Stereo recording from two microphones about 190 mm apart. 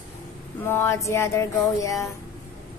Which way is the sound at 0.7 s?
15° left (ahead or behind).